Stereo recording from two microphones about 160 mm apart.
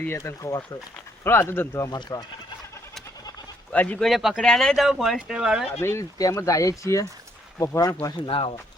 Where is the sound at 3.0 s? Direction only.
25° left (ahead or behind).